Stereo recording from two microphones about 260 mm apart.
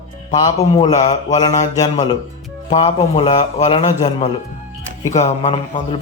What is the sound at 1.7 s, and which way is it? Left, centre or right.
A man's voice, centre.